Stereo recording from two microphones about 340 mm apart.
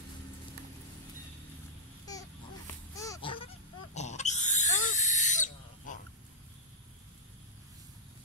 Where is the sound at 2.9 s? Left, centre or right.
Centre.